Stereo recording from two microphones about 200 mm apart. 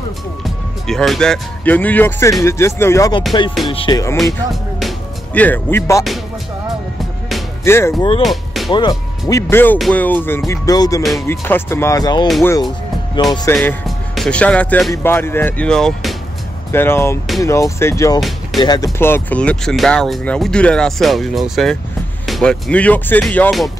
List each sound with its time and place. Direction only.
0.8 s speech: centre (ahead or behind); by 4.0 s 25° left (ahead or behind)
4.2 s speech: centre (ahead or behind)
7.6 s speech: 10° left (ahead or behind)
8.2 s speech: centre (ahead or behind)
9.3 s speech: 10° left (ahead or behind)
11.0 s speech: centre (ahead or behind)
11.2 s speech: 10° left (ahead or behind)
13.6 s speech: centre (ahead or behind)